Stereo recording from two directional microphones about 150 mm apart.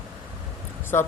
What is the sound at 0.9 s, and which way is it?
Speech, 15° left (ahead or behind).